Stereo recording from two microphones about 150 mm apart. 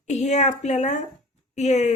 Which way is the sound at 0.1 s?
45° left (ahead or behind).